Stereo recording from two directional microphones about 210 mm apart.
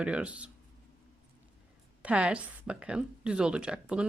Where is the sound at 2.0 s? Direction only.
5° right (ahead or behind).